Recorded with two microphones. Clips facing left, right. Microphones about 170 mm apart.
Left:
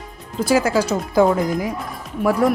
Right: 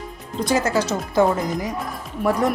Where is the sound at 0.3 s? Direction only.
10° left (ahead or behind).